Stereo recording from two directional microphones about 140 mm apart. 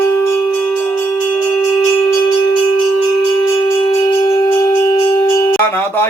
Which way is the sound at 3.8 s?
35° left (ahead or behind).